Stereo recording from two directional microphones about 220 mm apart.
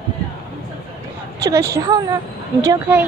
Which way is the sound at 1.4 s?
15° right (ahead or behind).